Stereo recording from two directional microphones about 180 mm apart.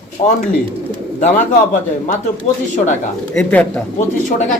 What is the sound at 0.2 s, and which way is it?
Speech, 25° left (ahead or behind).